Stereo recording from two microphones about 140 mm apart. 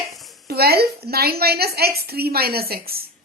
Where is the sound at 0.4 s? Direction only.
90° right.